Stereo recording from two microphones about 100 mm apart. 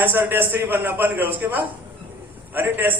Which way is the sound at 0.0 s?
20° right (ahead or behind).